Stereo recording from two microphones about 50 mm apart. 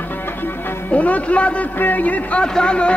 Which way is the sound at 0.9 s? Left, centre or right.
Left.